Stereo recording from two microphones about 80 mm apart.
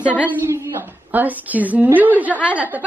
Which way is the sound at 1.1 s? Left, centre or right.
Right.